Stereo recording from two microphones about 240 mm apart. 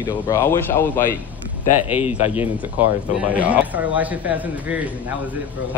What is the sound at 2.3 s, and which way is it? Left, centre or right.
A man's voice, centre.